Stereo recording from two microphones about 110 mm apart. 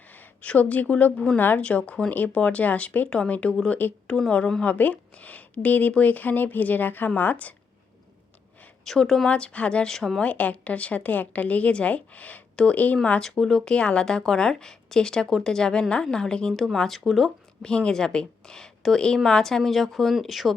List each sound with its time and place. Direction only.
0.1 s speech: 15° left (ahead or behind)
8.8 s speech: 5° left (ahead or behind)